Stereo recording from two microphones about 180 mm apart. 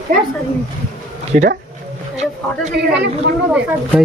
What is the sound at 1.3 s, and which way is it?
Speech, 50° right (ahead or behind).